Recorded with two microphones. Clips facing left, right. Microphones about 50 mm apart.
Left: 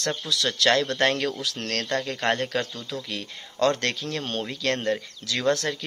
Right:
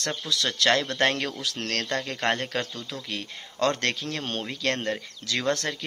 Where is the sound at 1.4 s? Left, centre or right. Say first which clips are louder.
Even; right.